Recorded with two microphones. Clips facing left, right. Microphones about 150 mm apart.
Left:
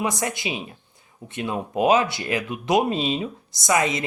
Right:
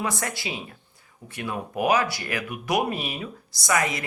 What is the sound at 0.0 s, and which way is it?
Speech, 20° left (ahead or behind).